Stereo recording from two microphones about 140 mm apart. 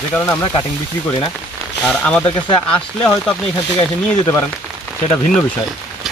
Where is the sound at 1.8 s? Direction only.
10° left (ahead or behind).